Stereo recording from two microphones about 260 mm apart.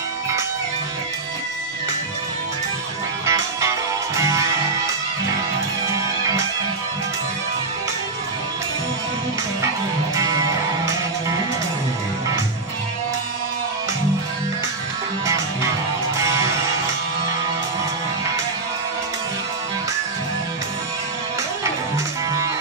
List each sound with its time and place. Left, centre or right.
3.3 s music: centre
10.1 s music: centre
16.2 s music: centre
21.9 s music: centre